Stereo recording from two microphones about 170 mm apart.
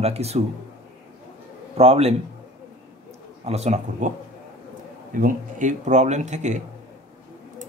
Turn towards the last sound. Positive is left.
turn(degrees=-45)  # may be behind; listen again after turning